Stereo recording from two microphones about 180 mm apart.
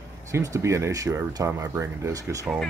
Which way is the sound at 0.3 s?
15° right (ahead or behind).